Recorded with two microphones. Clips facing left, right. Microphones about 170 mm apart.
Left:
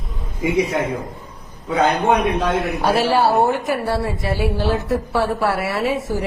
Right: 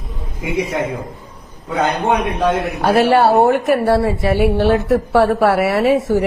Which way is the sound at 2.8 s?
60° right (ahead or behind).